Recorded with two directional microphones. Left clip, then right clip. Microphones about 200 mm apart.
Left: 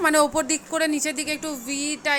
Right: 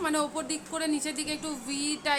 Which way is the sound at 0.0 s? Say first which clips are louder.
Left 10 dB; 35° left (ahead or behind).